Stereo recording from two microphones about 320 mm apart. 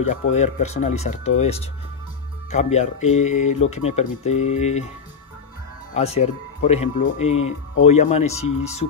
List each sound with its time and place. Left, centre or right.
0.3 s speech: left
5.9 s speech: centre